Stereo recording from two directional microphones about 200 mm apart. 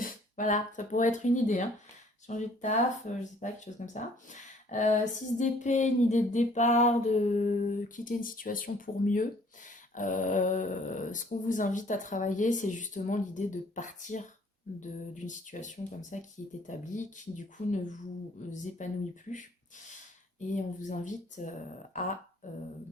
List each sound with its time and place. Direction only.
0.0 s speech: 40° left (ahead or behind)
20.8 s speech: 40° left (ahead or behind)